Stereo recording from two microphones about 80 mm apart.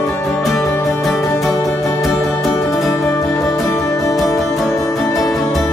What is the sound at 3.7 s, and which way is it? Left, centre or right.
Music, left.